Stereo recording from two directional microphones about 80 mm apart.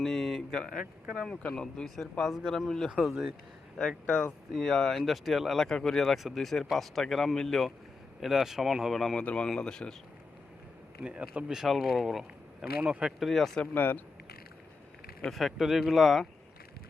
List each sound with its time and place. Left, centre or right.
0.0 s speech: centre
3.8 s speech: centre
11.0 s speech: centre
13.7 s speech: left
15.3 s speech: centre